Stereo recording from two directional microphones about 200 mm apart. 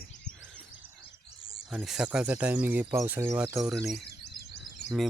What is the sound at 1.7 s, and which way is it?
Speech, 5° right (ahead or behind).